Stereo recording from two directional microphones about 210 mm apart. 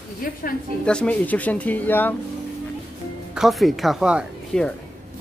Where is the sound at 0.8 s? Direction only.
5° left (ahead or behind).